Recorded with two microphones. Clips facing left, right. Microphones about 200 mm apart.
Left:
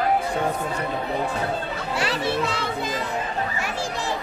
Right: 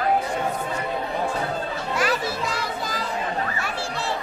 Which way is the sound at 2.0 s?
30° left (ahead or behind).